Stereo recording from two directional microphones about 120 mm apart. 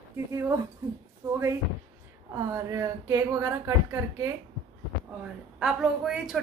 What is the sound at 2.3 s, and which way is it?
Speech, 25° right (ahead or behind).